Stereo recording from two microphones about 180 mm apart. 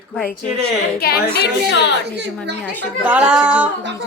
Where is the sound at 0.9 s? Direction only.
60° left (ahead or behind).